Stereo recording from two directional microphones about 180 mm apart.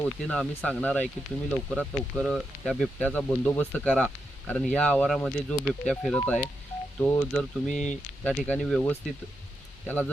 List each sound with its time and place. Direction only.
0.0 s speech: 10° left (ahead or behind)